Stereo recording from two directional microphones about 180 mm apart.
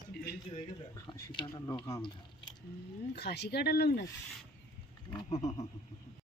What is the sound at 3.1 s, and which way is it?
Speech, 65° left (ahead or behind).